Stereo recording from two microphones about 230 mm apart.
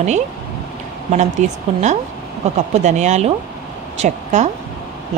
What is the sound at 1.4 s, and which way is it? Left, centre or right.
A woman's voice, right.